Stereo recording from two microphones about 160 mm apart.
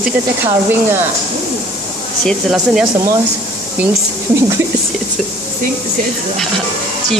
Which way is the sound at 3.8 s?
20° right (ahead or behind).